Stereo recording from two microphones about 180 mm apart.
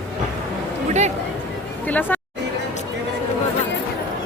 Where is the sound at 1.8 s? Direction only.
10° left (ahead or behind).